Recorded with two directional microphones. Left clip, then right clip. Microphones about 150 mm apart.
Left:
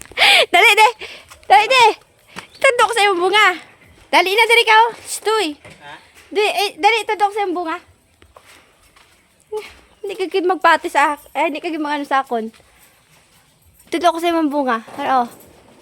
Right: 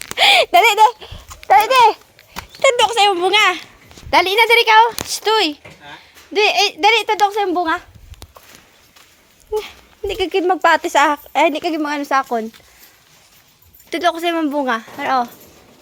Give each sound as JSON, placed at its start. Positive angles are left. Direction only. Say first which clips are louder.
{"t": 0.2, "sound": "a sound", "louder": "even", "side_deg": 35}
{"t": 1.5, "sound": "a sound", "louder": "even", "side_deg": 35}
{"t": 3.3, "sound": "a woman's voice", "louder": "even", "side_deg": 15}
{"t": 9.5, "sound": "speech", "louder": "right 5 dB", "side_deg": -10}
{"t": 10.0, "sound": "speech", "louder": "right 2 dB", "side_deg": 0}
{"t": 10.4, "sound": "a woman's voice", "louder": "left 1 dB", "side_deg": 15}
{"t": 10.9, "sound": "a woman's voice", "louder": "right 2 dB", "side_deg": -5}
{"t": 13.9, "sound": "a woman's voice", "louder": "left 2 dB", "side_deg": 35}